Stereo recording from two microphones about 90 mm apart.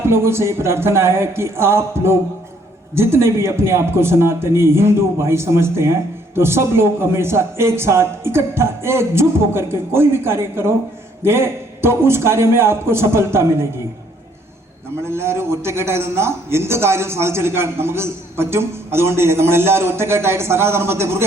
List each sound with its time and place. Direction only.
0.0 s a man's voice: 30° right (ahead or behind)
15.0 s a man's voice: 30° right (ahead or behind)